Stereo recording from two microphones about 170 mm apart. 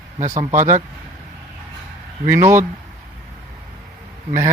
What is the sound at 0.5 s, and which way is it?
Speech, 50° right (ahead or behind).